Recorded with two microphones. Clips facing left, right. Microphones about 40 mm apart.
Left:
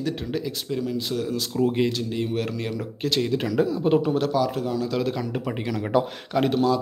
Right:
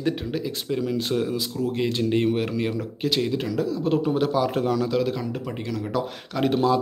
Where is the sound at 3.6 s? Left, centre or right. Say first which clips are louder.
Left 2 dB; centre.